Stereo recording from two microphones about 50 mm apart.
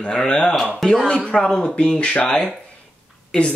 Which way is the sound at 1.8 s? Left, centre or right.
Left.